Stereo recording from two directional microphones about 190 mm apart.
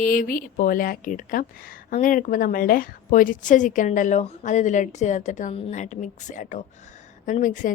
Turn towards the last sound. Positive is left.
turn(degrees=40)  # may be behind; listen again after turning